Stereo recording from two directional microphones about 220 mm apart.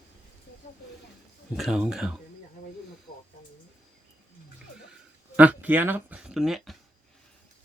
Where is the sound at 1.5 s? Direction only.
Centre (ahead or behind).